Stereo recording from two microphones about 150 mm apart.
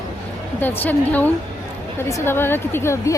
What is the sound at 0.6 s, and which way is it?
A woman's voice, 10° left (ahead or behind).